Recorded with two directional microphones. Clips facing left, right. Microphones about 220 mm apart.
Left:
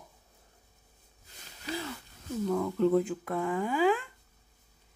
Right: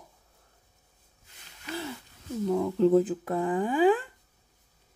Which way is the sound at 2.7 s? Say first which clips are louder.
Right 5 dB; 35° right (ahead or behind).